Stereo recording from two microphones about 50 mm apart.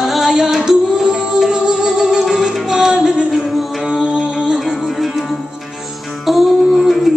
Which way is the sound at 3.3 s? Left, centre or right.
Centre.